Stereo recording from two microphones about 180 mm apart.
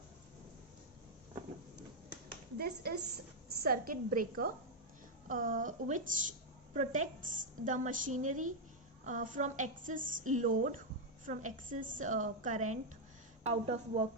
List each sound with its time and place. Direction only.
2.6 s a woman's voice: 60° right (ahead or behind); by 14.0 s 35° right (ahead or behind)